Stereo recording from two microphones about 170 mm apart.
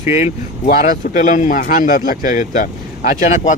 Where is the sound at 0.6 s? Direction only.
55° left (ahead or behind).